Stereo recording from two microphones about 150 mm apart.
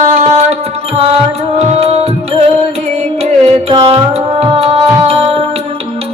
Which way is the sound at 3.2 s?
40° right (ahead or behind).